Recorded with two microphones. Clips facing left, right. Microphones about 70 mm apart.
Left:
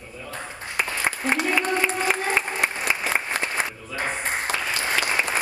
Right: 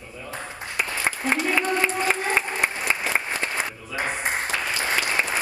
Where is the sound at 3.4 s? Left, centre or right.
Left.